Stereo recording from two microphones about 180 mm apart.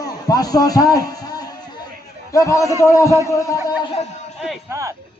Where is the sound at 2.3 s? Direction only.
15° left (ahead or behind).